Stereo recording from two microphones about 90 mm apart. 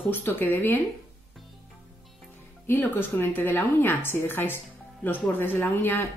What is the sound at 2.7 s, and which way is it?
A woman's voice, 25° left (ahead or behind).